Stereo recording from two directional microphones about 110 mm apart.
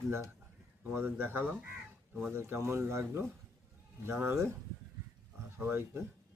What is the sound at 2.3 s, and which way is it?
Speech, 25° right (ahead or behind).